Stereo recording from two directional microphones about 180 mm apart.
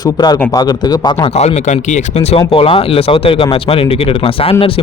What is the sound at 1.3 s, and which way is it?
Speech, 35° left (ahead or behind).